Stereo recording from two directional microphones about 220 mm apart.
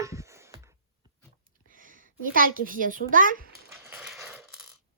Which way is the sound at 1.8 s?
40° right (ahead or behind).